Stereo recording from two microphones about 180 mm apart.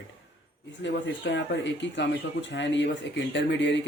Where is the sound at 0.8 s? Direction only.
80° left.